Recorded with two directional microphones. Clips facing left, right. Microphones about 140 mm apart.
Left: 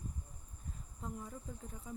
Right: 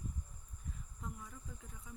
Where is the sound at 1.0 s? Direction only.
30° left (ahead or behind).